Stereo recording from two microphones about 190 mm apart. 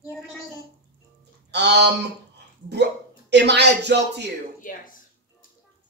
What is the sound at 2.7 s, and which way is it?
Speech, 65° right (ahead or behind).